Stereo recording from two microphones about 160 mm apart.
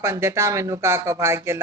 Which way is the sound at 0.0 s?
15° right (ahead or behind).